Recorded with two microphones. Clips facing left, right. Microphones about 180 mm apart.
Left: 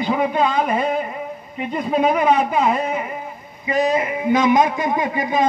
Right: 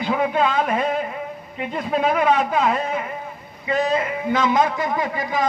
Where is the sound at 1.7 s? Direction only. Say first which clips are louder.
Left 2 dB; 10° left (ahead or behind).